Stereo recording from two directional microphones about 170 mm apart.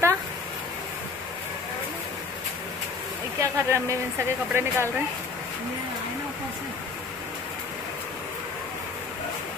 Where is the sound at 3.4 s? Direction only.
15° right (ahead or behind).